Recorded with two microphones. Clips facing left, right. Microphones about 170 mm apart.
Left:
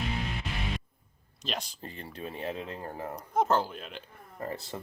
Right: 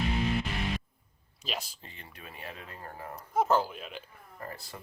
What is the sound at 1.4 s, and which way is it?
Speech, 5° right (ahead or behind).